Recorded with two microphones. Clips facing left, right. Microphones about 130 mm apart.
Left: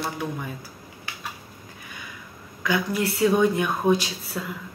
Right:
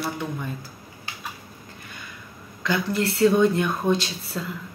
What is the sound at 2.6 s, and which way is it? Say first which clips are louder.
Speech: even; 10° left (ahead or behind).